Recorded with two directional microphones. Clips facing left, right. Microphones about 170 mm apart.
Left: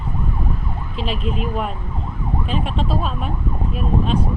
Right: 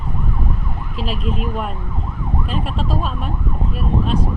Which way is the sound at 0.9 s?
40° right (ahead or behind).